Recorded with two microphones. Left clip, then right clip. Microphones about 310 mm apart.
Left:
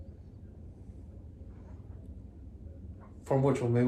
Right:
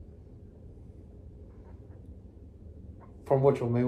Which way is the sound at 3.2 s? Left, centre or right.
Centre.